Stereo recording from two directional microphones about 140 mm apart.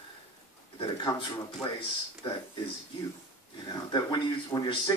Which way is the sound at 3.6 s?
30° left (ahead or behind).